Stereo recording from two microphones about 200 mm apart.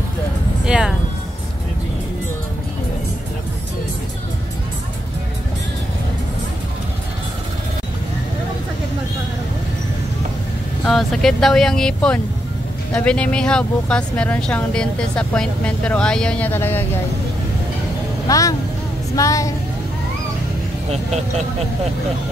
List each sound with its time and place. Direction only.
0.7 s speech: 5° right (ahead or behind)
10.9 s speech: centre (ahead or behind)
18.3 s speech: 15° left (ahead or behind)